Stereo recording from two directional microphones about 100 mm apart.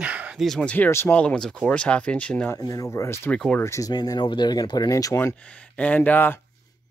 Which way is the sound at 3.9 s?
45° left (ahead or behind).